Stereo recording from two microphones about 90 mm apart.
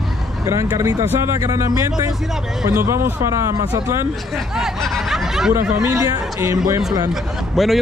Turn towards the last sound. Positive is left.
turn(degrees=0)  # may be behind; listen again after turning